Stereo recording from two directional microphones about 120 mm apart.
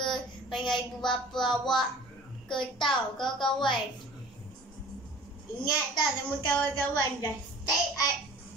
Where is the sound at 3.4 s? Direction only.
40° left (ahead or behind).